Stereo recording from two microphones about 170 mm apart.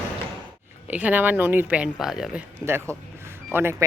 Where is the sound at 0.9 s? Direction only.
10° right (ahead or behind).